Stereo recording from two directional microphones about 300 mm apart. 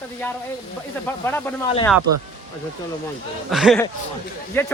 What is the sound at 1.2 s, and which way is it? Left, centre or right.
Speech, centre.